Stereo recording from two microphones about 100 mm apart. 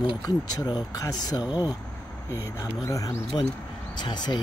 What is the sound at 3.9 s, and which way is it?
Speech, 45° left (ahead or behind).